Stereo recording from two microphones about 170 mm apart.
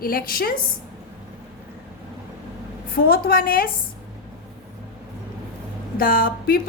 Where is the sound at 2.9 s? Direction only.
60° left (ahead or behind).